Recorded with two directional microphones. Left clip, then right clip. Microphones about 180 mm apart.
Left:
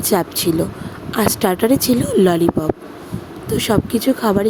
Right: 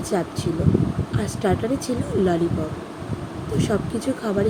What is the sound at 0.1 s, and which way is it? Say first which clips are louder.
Speech: left 8 dB; 65° left (ahead or behind).